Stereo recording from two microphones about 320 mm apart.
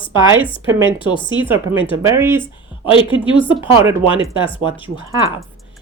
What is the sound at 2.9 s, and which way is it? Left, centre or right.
Speech, centre.